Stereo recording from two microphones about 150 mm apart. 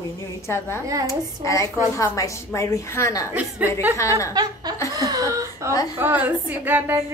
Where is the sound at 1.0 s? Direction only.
20° left (ahead or behind).